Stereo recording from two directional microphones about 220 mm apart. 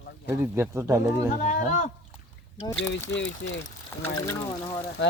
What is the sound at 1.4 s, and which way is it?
Speech, 35° left (ahead or behind).